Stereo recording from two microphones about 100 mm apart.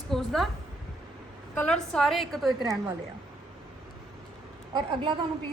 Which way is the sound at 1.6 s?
5° left (ahead or behind).